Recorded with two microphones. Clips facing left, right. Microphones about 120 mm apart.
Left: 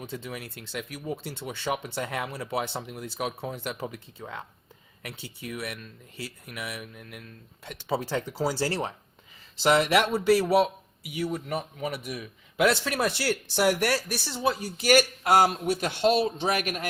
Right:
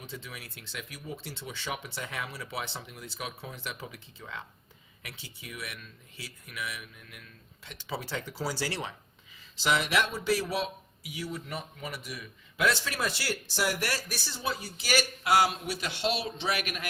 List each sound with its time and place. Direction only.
0.0 s a man's voice: 55° left (ahead or behind)
4.2 s speech: 40° left (ahead or behind)
5.0 s speech: 50° left (ahead or behind)
8.1 s speech: 40° left (ahead or behind)
9.6 s a man's voice: 55° left (ahead or behind)